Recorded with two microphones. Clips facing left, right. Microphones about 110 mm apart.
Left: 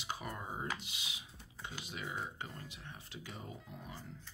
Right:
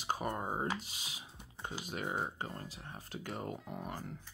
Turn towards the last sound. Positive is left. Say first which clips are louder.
# right 7 dB
turn(degrees=-55)  # may be behind; listen again after turning